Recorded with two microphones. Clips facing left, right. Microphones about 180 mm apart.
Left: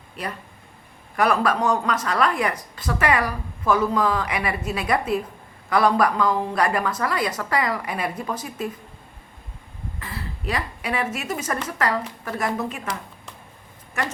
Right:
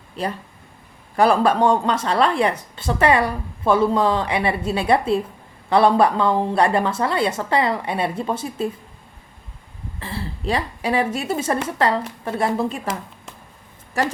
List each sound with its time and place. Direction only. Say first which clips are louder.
1.1 s speech: right 4 dB; 30° right (ahead or behind)
10.0 s speech: right 6 dB; 30° right (ahead or behind)
14.0 s speech: right 6 dB; 35° right (ahead or behind)